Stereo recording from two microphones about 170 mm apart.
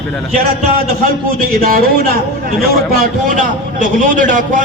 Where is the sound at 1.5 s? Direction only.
60° right (ahead or behind).